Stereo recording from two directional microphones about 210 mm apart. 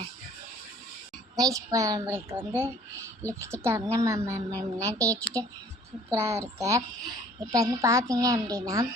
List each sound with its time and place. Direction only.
1.4 s a woman's voice: 15° right (ahead or behind)